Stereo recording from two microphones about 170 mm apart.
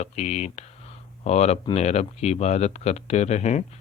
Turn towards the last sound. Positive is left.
turn(degrees=40)  # may be behind; listen again after turning